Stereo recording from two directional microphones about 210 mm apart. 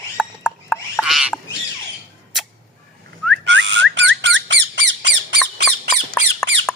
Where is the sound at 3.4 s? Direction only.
60° right (ahead or behind).